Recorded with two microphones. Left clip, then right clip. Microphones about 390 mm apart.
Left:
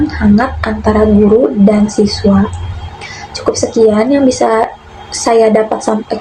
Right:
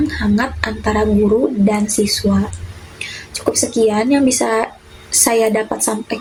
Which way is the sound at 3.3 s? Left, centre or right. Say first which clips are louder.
Left 5 dB; right.